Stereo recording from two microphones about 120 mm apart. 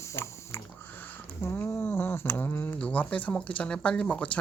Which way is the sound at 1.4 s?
20° left (ahead or behind).